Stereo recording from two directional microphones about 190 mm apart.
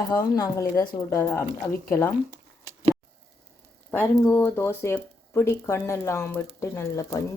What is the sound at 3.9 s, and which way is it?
Speech, 10° left (ahead or behind).